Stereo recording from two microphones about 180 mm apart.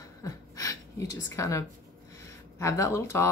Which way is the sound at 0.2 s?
20° left (ahead or behind).